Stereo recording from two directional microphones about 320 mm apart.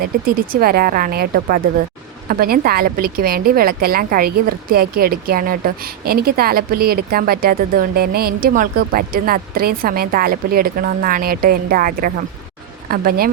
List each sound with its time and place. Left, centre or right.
0.5 s a woman's voice: right